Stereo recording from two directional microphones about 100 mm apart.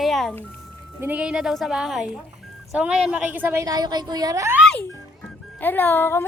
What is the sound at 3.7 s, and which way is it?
Speech, 45° right (ahead or behind).